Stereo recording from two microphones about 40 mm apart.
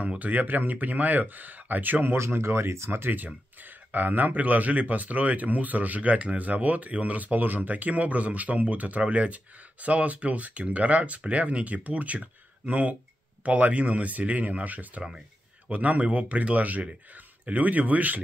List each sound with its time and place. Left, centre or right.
0.0 s speech: right
2.3 s speech: right
3.6 s speech: right